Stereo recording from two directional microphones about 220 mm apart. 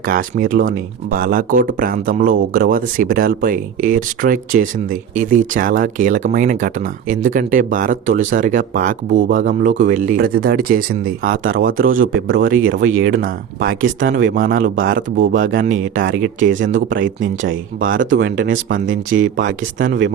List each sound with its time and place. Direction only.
0.0 s speech: 40° right (ahead or behind)
12.5 s speech: 60° right (ahead or behind); by 15.4 s 40° right (ahead or behind)
16.0 s speech: 60° right (ahead or behind)
16.6 s speech: 35° right (ahead or behind)
17.8 s speech: 60° right (ahead or behind)